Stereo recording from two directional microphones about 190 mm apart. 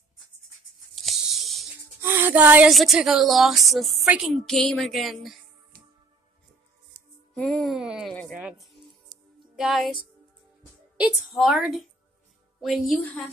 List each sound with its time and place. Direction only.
0.9 s a sound: centre (ahead or behind)
2.0 s speech: 10° right (ahead or behind)
7.3 s speech: centre (ahead or behind)
11.0 s speech: centre (ahead or behind)